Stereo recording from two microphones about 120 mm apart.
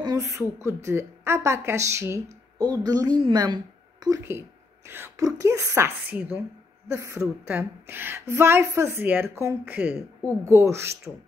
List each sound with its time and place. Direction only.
0.0 s a woman's voice: 30° right (ahead or behind)
4.0 s a woman's voice: 25° right (ahead or behind)
7.2 s a woman's voice: 10° right (ahead or behind)